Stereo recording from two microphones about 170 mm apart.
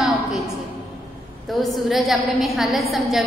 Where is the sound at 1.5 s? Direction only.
Centre (ahead or behind).